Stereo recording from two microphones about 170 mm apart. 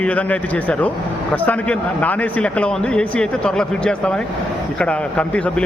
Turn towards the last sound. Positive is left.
turn(degrees=5)  # may be behind; listen again after turning